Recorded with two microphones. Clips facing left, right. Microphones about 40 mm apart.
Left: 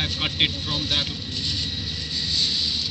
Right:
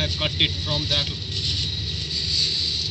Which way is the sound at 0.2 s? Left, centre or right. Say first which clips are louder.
Right 1 dB; centre.